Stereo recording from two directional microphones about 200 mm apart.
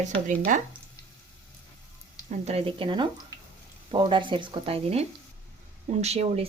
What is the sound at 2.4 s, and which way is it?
Speech, 30° right (ahead or behind).